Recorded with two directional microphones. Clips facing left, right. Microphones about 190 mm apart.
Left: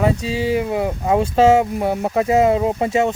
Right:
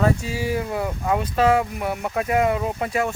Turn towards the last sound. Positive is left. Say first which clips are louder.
# left 6 dB
turn(degrees=25)  # may be behind; listen again after turning